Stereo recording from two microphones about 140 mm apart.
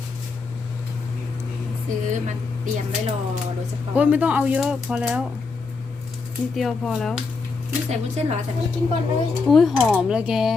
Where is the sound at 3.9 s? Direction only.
10° right (ahead or behind).